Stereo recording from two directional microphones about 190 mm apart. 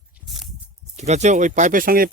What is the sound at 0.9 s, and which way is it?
Speech, 35° right (ahead or behind).